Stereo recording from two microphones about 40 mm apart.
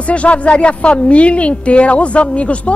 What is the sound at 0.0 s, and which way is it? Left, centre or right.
A woman's voice, left.